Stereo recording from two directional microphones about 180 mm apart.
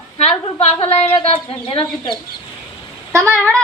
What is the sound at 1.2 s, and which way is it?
Speech, 30° left (ahead or behind).